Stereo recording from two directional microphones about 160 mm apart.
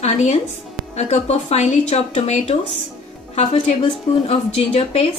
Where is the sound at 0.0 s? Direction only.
45° left (ahead or behind).